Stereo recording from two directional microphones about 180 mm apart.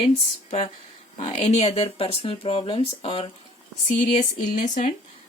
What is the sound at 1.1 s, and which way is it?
Speech, 35° left (ahead or behind).